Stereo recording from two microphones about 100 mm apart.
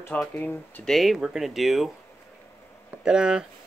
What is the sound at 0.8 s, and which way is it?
Speech, centre (ahead or behind).